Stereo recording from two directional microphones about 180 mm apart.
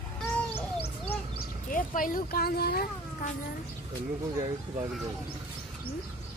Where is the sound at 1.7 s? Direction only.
50° left (ahead or behind).